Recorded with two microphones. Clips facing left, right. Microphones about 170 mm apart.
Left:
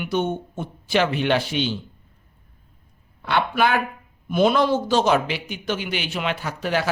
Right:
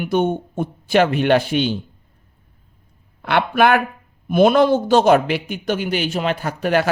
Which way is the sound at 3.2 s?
60° right (ahead or behind).